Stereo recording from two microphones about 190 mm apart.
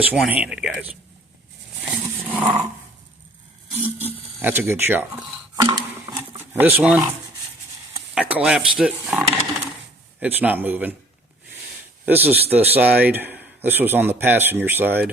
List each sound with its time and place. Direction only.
0.1 s speech: 5° right (ahead or behind)
1.8 s a sound: 5° right (ahead or behind)
3.8 s a man's voice: 10° right (ahead or behind)
5.5 s dishes: 20° right (ahead or behind)
6.5 s a man's voice: 10° right (ahead or behind)
8.1 s a man's voice: 5° right (ahead or behind)
12.0 s a man's voice: 10° right (ahead or behind)